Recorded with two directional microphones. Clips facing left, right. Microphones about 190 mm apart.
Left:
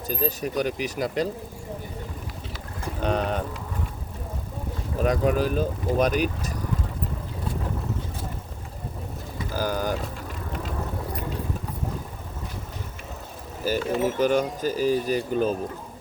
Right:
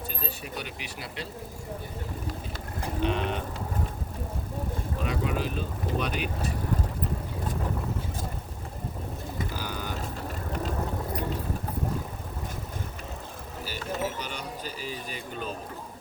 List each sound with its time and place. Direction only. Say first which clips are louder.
0.1 s speech: left 10 dB; 40° left (ahead or behind)
3.0 s speech: left 4 dB; 40° left (ahead or behind)
5.0 s speech: left 8 dB; 45° left (ahead or behind)
9.5 s bird: left 9 dB; 45° left (ahead or behind)
13.7 s speech: left 9 dB; 45° left (ahead or behind)